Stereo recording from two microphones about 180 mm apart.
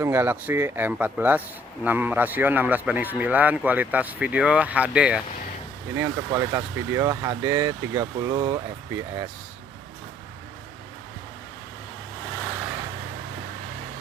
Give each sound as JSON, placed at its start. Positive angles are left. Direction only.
{"t": 0.0, "sound": "a man's voice", "side_deg": -10}